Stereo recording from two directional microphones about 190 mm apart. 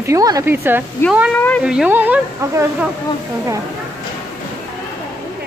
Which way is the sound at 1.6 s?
5° right (ahead or behind).